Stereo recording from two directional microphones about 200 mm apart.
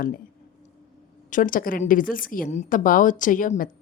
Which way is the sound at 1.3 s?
45° left (ahead or behind).